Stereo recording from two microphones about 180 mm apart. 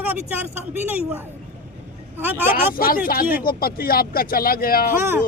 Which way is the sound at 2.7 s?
55° left (ahead or behind).